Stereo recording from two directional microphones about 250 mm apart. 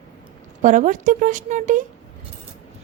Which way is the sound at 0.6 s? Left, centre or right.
Right.